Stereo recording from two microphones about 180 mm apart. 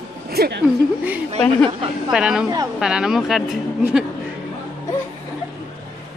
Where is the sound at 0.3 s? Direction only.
65° right (ahead or behind).